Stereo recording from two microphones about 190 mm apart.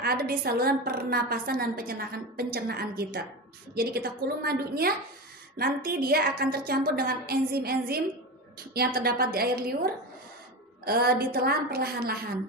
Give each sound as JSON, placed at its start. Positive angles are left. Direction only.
{"t": 0.0, "sound": "a woman's voice", "side_deg": -55}